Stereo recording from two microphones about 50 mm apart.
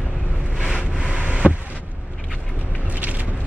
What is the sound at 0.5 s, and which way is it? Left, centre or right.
Vehicle, centre.